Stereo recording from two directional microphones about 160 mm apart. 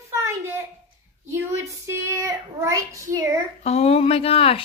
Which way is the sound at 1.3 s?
15° right (ahead or behind).